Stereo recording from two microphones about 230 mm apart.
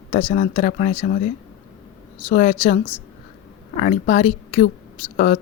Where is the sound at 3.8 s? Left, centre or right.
Left.